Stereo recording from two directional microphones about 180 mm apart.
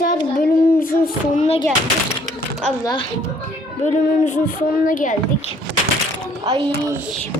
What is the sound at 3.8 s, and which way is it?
Speech, 40° left (ahead or behind).